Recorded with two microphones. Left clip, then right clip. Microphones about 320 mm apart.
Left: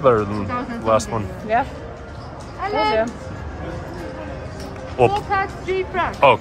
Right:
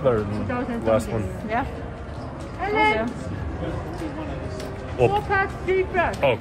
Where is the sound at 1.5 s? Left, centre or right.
Left.